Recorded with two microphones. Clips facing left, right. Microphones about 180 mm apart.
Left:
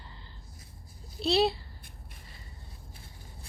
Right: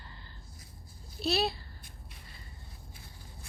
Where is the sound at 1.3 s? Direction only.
30° left (ahead or behind).